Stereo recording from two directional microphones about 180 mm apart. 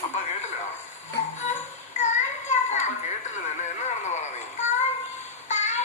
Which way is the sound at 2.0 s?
40° left (ahead or behind).